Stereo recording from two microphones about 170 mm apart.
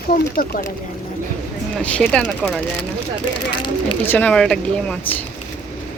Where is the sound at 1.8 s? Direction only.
5° left (ahead or behind).